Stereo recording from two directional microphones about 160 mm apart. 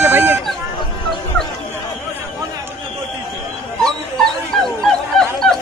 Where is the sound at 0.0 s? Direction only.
15° right (ahead or behind).